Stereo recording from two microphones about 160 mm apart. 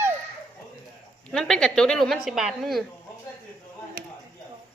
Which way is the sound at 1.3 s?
5° left (ahead or behind).